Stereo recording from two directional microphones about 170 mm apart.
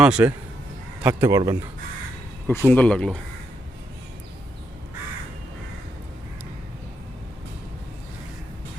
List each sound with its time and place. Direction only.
0.0 s speech: 5° right (ahead or behind)
2.5 s speech: 10° left (ahead or behind)